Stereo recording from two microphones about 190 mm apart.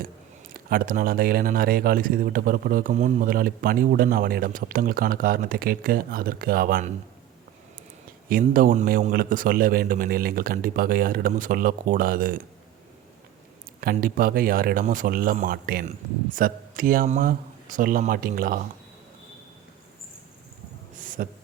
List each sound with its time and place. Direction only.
0.5 s speech: 50° right (ahead or behind)
8.3 s speech: 50° right (ahead or behind)
13.8 s speech: 50° right (ahead or behind)
21.0 s a sound: 45° right (ahead or behind)